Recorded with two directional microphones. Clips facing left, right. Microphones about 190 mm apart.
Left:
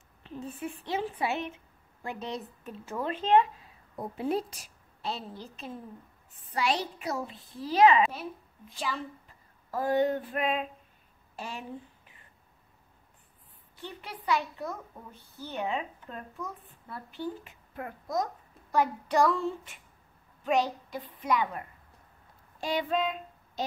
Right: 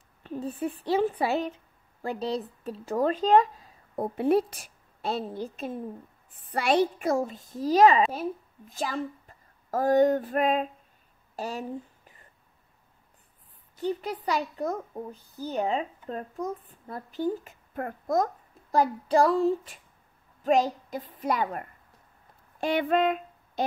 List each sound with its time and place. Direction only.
0.2 s a child's voice: 40° right (ahead or behind)
4.0 s a woman's voice: 60° right (ahead or behind); by 11.6 s 40° right (ahead or behind)
13.7 s a child's voice: 40° right (ahead or behind)
22.6 s a sound: 55° right (ahead or behind)